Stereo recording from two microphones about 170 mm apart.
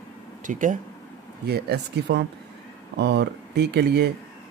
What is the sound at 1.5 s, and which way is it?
Speech, 70° right (ahead or behind).